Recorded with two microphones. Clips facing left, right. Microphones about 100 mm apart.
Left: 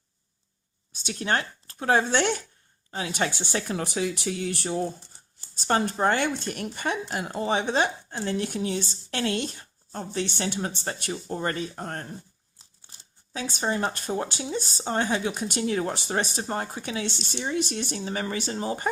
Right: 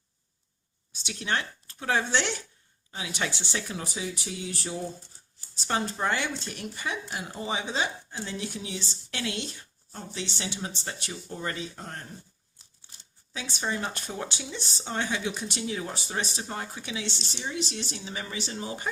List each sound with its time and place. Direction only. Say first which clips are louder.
0.9 s speech: left 4 dB; 45° left (ahead or behind)
7.1 s speech: left 6 dB; 70° left (ahead or behind); by 12.0 s 50° left (ahead or behind)
13.3 s speech: left 4 dB; 45° left (ahead or behind)